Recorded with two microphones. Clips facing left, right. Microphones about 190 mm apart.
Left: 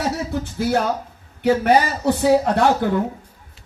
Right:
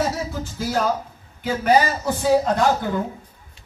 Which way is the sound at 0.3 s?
65° left (ahead or behind).